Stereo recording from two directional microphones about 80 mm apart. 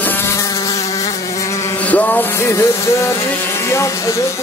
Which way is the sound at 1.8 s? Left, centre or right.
Centre.